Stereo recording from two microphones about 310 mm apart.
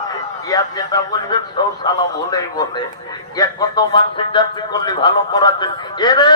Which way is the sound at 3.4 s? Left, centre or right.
Centre.